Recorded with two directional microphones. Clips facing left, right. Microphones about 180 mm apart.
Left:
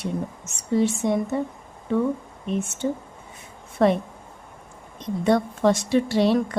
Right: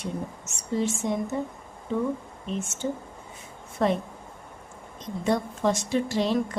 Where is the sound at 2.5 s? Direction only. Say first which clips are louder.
Left 5 dB; 60° left (ahead or behind).